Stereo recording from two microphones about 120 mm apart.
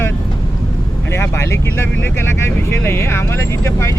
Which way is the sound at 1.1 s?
20° left (ahead or behind).